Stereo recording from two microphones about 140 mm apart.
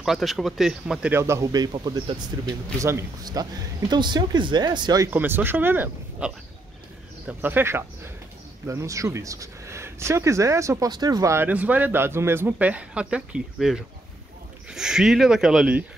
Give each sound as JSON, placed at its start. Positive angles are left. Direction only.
{"t": 0.0, "sound": "speech", "side_deg": 0}
{"t": 1.1, "sound": "speech", "side_deg": -20}
{"t": 5.1, "sound": "speech", "side_deg": -15}